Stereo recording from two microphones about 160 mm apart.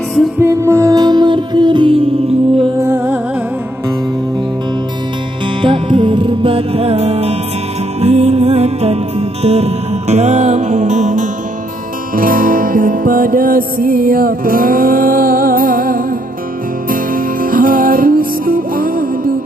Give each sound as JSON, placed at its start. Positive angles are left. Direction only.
{"t": 0.4, "sound": "music", "side_deg": -20}
{"t": 2.8, "sound": "music", "side_deg": -15}
{"t": 5.6, "sound": "music", "side_deg": -30}
{"t": 12.2, "sound": "music", "side_deg": -60}